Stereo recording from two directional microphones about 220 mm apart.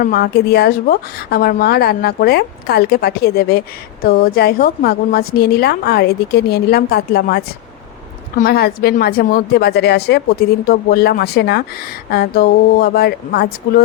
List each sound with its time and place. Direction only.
0.0 s a woman's voice: 45° left (ahead or behind)